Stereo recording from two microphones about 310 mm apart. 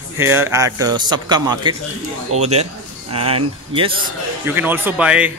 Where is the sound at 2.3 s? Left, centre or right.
Right.